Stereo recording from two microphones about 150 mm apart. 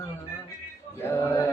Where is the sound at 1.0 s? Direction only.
15° left (ahead or behind).